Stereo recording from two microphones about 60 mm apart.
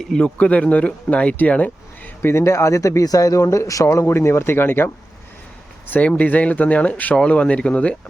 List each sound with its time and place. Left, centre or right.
0.0 s speech: centre
0.3 s speech: centre
2.2 s speech: left
3.8 s speech: left
5.9 s speech: left
7.2 s speech: centre